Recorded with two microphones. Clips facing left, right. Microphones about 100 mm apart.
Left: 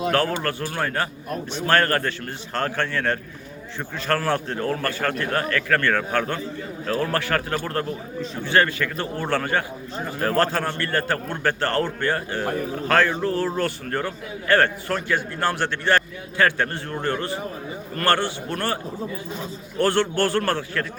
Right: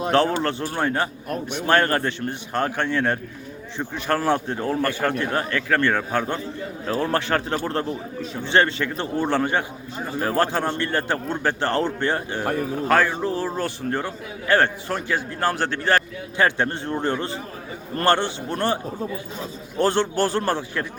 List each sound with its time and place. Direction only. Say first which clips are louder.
0.1 s a man's voice: right 7 dB; 25° right (ahead or behind)
15.4 s a man's voice: right 1 dB; 40° right (ahead or behind)
16.4 s a man's voice: even; 20° right (ahead or behind)
19.8 s a man's voice: even; 20° right (ahead or behind)